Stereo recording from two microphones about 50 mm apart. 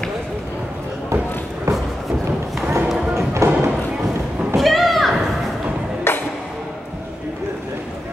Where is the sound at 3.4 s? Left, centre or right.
Right.